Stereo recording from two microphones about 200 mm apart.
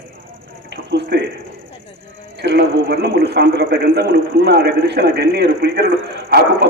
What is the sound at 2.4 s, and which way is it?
A man's voice, 55° right (ahead or behind).